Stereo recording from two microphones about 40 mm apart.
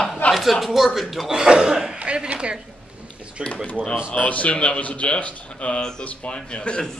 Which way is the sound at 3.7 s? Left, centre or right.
Left.